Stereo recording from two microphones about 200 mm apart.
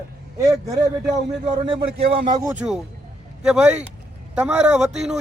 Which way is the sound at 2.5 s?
5° right (ahead or behind).